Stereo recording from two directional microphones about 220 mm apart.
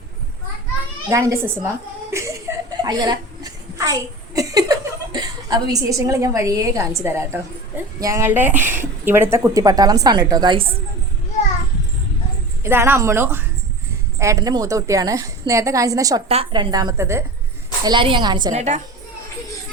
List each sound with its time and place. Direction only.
1.1 s a woman's voice: 15° right (ahead or behind)
2.8 s a sound: 20° right (ahead or behind)
4.4 s a woman's voice: 15° right (ahead or behind)
12.6 s a woman's voice: 10° right (ahead or behind)
18.5 s a woman's voice: 30° right (ahead or behind)